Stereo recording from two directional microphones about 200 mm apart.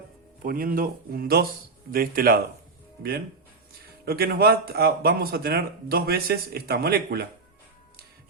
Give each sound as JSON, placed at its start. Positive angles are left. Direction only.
{"t": 0.4, "sound": "speech", "side_deg": -45}
{"t": 4.0, "sound": "speech", "side_deg": -50}